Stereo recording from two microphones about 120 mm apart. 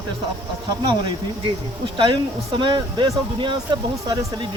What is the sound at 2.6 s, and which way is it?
Speech, 40° right (ahead or behind).